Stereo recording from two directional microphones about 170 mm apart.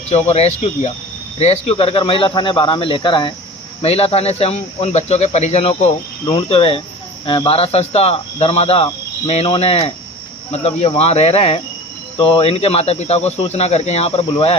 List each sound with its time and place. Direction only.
0.3 s speech: 40° left (ahead or behind)